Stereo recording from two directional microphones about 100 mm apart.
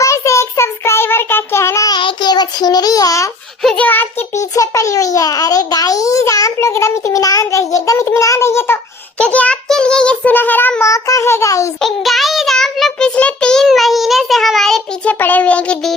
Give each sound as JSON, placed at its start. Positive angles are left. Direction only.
{"t": 0.0, "sound": "child singing", "side_deg": 30}
{"t": 1.9, "sound": "child singing", "side_deg": 50}
{"t": 3.6, "sound": "a child's voice", "side_deg": 5}
{"t": 4.4, "sound": "a child's voice", "side_deg": 35}
{"t": 7.7, "sound": "a sound", "side_deg": 30}
{"t": 9.1, "sound": "child singing", "side_deg": 10}
{"t": 10.8, "sound": "a sound", "side_deg": 30}
{"t": 11.8, "sound": "child singing", "side_deg": 0}
{"t": 15.0, "sound": "child singing", "side_deg": 15}